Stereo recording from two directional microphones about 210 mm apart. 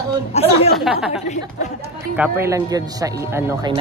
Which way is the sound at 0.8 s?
5° right (ahead or behind).